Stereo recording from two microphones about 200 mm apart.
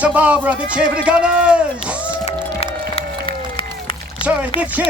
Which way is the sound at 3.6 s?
25° left (ahead or behind).